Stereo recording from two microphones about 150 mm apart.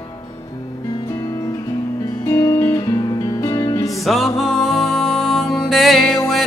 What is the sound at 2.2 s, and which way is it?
Music, 20° left (ahead or behind).